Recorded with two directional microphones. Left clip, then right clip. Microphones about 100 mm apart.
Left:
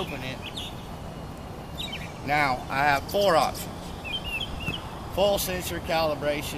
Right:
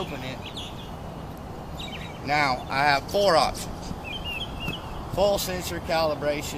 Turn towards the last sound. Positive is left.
turn(degrees=0)  # may be behind; listen again after turning